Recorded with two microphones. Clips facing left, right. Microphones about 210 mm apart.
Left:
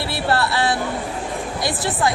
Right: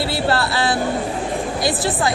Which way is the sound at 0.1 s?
30° right (ahead or behind).